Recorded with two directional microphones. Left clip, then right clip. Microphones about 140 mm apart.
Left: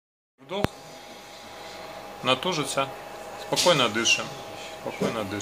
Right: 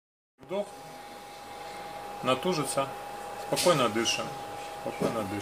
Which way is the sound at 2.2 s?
25° right (ahead or behind).